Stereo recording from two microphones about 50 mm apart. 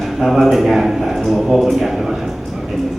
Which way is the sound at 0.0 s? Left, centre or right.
Centre.